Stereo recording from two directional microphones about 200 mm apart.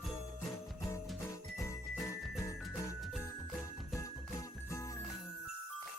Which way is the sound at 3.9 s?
15° left (ahead or behind).